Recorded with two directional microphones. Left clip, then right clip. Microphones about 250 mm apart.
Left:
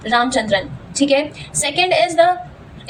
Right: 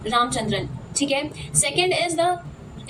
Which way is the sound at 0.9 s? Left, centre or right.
Centre.